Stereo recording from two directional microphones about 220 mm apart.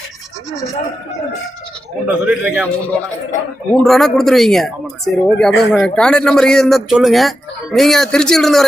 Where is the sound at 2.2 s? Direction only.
5° right (ahead or behind).